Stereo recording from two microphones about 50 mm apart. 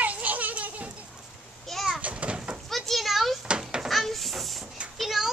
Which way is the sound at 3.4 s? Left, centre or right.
Centre.